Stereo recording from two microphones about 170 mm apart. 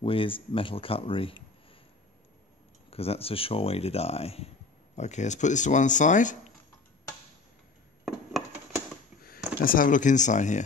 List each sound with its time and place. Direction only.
0.0 s speech: 30° left (ahead or behind)
2.9 s speech: 35° left (ahead or behind)
8.0 s a sound: centre (ahead or behind)
9.6 s speech: 55° left (ahead or behind)